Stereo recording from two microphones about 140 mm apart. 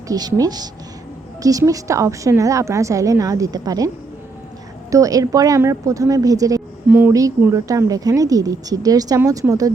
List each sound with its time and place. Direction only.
0.1 s a woman's voice: 25° right (ahead or behind)